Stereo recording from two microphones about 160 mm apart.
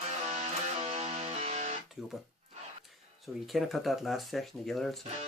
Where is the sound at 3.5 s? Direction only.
Centre (ahead or behind).